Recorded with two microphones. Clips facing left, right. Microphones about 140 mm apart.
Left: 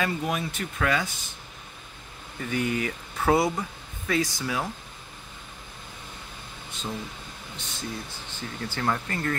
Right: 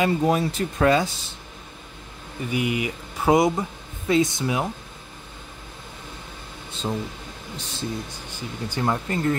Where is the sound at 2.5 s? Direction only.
10° right (ahead or behind).